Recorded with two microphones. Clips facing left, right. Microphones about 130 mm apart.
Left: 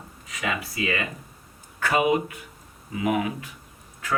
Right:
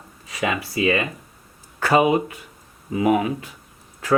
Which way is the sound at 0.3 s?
30° right (ahead or behind).